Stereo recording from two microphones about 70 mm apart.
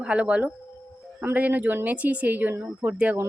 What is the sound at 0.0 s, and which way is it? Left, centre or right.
A woman's voice, centre.